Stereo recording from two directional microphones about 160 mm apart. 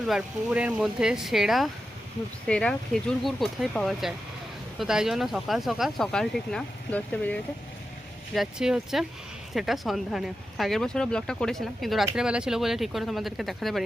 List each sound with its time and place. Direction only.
0.1 s speech: 5° right (ahead or behind); by 7.3 s 10° left (ahead or behind)
8.3 s speech: centre (ahead or behind)